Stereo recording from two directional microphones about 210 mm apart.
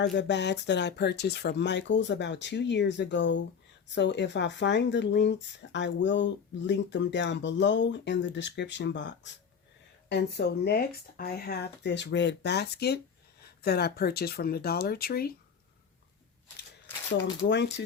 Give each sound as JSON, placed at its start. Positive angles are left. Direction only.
{"t": 0.0, "sound": "speech", "side_deg": 55}
{"t": 17.2, "sound": "speech", "side_deg": 55}